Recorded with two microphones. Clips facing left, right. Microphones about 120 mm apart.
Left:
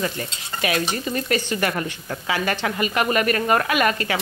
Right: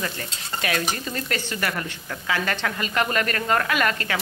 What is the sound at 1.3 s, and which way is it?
Stir, 20° left (ahead or behind).